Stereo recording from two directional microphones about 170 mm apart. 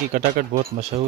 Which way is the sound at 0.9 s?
35° right (ahead or behind).